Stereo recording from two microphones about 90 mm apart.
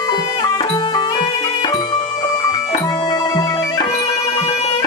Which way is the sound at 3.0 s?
50° left (ahead or behind).